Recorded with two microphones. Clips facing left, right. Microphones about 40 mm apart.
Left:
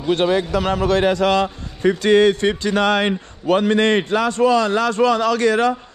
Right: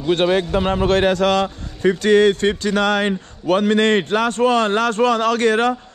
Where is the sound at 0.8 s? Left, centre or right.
Right.